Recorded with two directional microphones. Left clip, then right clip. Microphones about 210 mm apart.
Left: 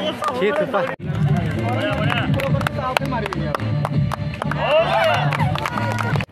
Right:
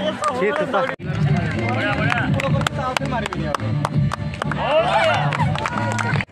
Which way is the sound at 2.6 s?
50° right (ahead or behind).